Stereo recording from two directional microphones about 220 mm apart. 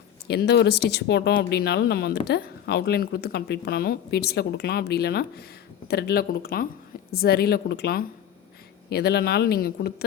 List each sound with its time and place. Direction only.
0.3 s speech: 45° left (ahead or behind)